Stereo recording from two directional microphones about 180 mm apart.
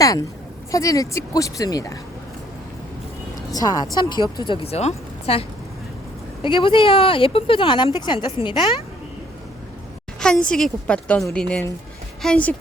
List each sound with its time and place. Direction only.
0.0 s a woman's voice: 20° left (ahead or behind)
3.5 s a woman's voice: 20° left (ahead or behind)
10.2 s a sound: 5° left (ahead or behind)
10.5 s a woman's voice: 5° left (ahead or behind)